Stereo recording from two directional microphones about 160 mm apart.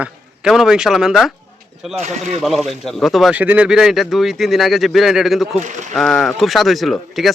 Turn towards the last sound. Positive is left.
turn(degrees=0)  # may be behind; listen again after turning